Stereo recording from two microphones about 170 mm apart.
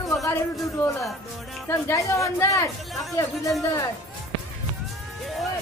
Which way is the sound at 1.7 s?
15° left (ahead or behind).